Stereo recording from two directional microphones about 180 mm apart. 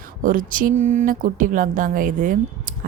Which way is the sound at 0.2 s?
50° right (ahead or behind).